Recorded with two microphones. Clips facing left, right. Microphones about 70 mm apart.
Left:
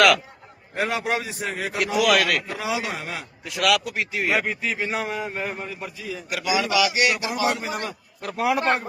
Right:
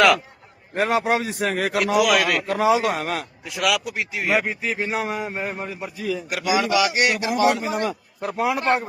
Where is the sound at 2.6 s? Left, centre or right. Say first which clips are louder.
Right 8 dB; right.